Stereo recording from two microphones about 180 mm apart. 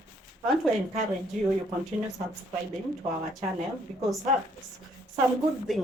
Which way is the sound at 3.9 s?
40° right (ahead or behind).